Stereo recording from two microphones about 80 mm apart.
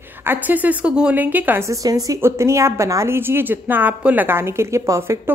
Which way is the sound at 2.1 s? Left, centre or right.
Right.